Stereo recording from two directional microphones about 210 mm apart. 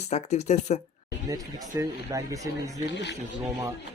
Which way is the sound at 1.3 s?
15° right (ahead or behind).